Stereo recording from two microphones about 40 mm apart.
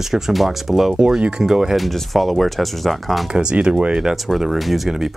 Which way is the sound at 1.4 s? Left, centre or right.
Centre.